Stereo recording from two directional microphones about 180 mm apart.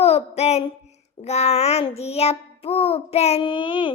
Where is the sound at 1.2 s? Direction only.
35° left (ahead or behind).